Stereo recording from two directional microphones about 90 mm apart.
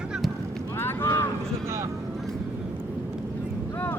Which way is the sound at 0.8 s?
25° left (ahead or behind).